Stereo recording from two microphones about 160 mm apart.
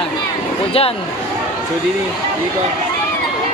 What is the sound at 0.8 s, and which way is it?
Speech, 35° left (ahead or behind).